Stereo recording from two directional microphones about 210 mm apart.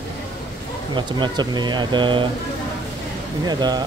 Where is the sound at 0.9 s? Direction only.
20° right (ahead or behind).